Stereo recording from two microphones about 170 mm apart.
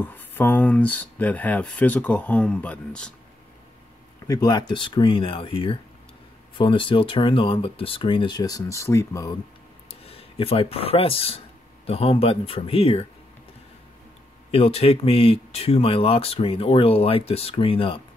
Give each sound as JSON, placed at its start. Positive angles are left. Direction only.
{"t": 0.0, "sound": "speech", "side_deg": 10}
{"t": 4.3, "sound": "speech", "side_deg": 25}
{"t": 10.0, "sound": "speech", "side_deg": 35}
{"t": 14.5, "sound": "speech", "side_deg": 35}